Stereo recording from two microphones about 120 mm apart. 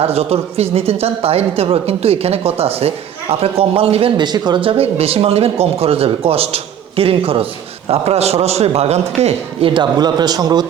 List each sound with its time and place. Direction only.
0.0 s speech: 60° right (ahead or behind)
4.2 s speech: 35° right (ahead or behind); by 9.8 s 50° right (ahead or behind)
10.0 s a man's voice: 35° right (ahead or behind)